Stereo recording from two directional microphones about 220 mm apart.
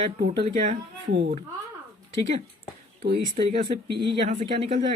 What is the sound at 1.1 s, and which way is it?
Speech, 50° right (ahead or behind).